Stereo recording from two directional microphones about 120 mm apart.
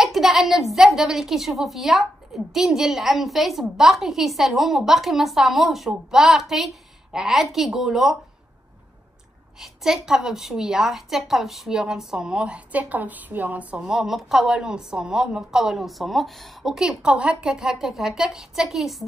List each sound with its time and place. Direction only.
0.0 s a woman's voice: centre (ahead or behind)
9.6 s a woman's voice: 5° right (ahead or behind)